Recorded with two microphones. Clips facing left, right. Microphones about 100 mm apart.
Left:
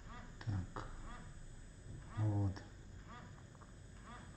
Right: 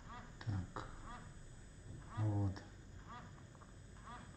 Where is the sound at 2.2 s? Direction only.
Centre (ahead or behind).